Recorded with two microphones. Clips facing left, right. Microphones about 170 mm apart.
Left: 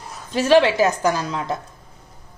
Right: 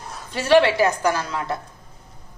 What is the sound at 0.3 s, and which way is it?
A woman's voice, 15° left (ahead or behind).